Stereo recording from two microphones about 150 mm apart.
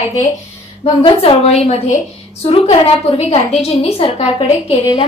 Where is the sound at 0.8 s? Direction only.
35° left (ahead or behind).